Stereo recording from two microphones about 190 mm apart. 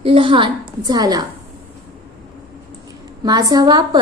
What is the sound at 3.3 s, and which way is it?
Speech, 20° right (ahead or behind).